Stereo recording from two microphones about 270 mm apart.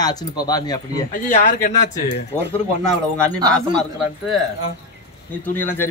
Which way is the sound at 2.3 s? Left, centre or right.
Centre.